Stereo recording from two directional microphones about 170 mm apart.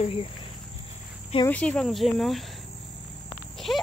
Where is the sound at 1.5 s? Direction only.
5° left (ahead or behind).